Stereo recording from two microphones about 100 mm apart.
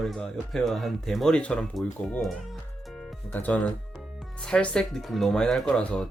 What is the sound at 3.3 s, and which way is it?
Speech, 15° left (ahead or behind).